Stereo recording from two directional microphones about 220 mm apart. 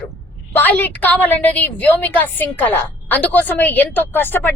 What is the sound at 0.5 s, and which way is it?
A woman's voice, 10° left (ahead or behind).